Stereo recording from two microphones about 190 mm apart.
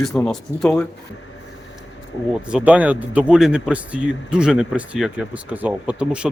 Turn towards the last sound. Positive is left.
turn(degrees=-5)  # may be behind; listen again after turning